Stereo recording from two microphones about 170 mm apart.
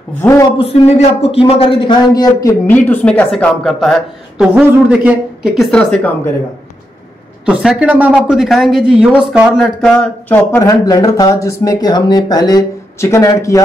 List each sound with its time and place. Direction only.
0.2 s speech: 15° left (ahead or behind)
0.6 s a man's voice: 35° left (ahead or behind); by 6.1 s 5° left (ahead or behind)
7.4 s speech: 5° right (ahead or behind); by 13.6 s 20° left (ahead or behind)